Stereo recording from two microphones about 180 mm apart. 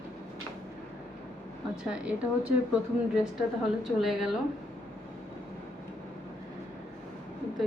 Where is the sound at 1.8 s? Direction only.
5° right (ahead or behind).